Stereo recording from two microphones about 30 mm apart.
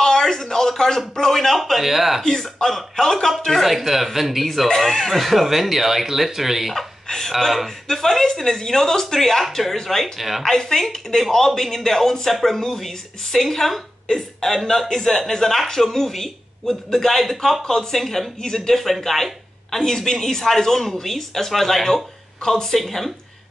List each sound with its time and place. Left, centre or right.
0.2 s speech: centre
1.8 s speech: centre
2.2 s speech: centre
4.7 s speech: centre
7.1 s speech: centre
10.1 s speech: centre
10.6 s speech: centre
17.6 s speech: centre